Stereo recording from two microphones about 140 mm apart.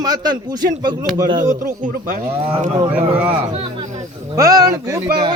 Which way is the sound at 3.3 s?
40° right (ahead or behind).